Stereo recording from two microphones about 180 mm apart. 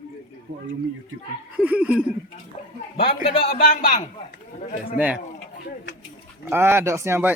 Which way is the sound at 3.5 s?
55° left (ahead or behind).